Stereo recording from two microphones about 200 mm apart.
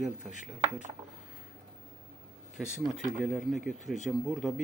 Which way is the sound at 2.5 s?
Centre (ahead or behind).